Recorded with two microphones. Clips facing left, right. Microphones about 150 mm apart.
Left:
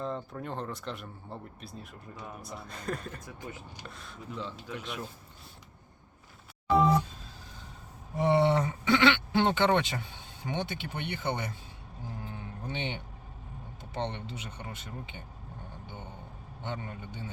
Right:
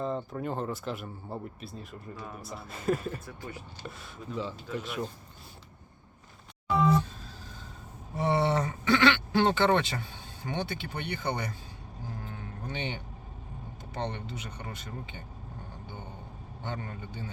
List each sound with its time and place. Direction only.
0.0 s speech: 5° right (ahead or behind)
3.2 s speech: 20° left (ahead or behind)
3.8 s speech: centre (ahead or behind)
8.1 s a sound: 20° left (ahead or behind)
12.2 s cattle: 25° left (ahead or behind)
13.9 s speech: 25° left (ahead or behind)
16.6 s speech: 15° left (ahead or behind)